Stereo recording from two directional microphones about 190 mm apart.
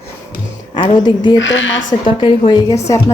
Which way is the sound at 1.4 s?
85° left.